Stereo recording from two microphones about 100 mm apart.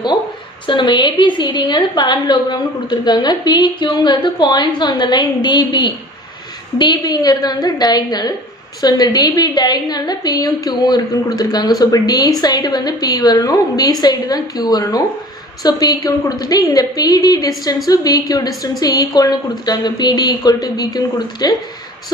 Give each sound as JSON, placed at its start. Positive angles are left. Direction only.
{"t": 0.7, "sound": "a woman's voice", "side_deg": 50}